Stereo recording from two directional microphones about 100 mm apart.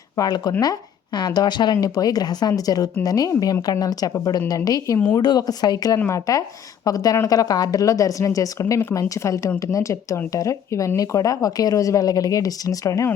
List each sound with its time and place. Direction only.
0.2 s speech: 40° left (ahead or behind)